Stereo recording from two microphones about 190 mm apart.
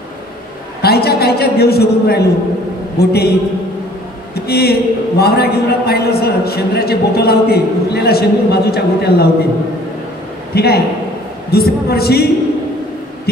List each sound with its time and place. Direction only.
0.8 s a man's voice: 55° left (ahead or behind)
4.5 s a man's voice: 55° left (ahead or behind)
10.5 s a man's voice: 55° left (ahead or behind)